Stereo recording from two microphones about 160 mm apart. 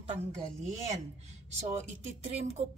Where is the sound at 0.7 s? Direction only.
45° right (ahead or behind).